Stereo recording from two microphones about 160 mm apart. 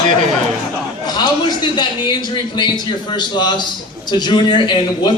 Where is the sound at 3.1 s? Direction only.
25° left (ahead or behind).